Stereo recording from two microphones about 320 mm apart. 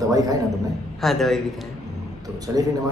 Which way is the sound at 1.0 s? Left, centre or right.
Centre.